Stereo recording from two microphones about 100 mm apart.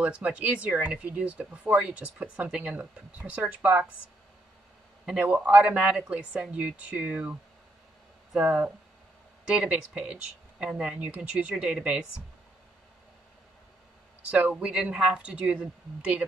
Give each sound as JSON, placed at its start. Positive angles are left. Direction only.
{"t": 0.0, "sound": "speech", "side_deg": -10}
{"t": 5.2, "sound": "speech", "side_deg": -15}
{"t": 14.3, "sound": "speech", "side_deg": -10}